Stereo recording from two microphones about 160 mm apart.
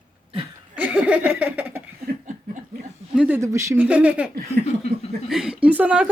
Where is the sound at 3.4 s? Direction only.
20° right (ahead or behind).